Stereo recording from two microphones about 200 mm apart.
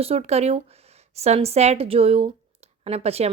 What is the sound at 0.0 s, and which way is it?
Speech, 30° right (ahead or behind).